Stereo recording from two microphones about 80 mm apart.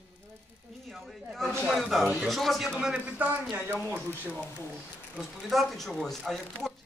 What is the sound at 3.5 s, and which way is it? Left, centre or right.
Speech, right.